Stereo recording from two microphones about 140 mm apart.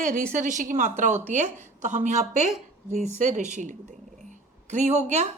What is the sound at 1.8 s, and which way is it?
A woman's voice, 60° right (ahead or behind).